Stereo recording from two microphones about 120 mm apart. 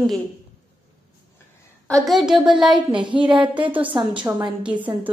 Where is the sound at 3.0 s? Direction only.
40° right (ahead or behind).